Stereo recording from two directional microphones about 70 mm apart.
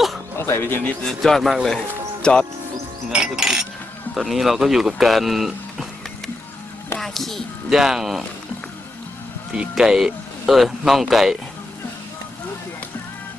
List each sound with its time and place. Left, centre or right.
0.3 s speech: left
1.0 s speech: centre
2.2 s speech: centre
3.1 s a sound: centre
4.1 s speech: centre
7.0 s speech: centre
9.6 s speech: centre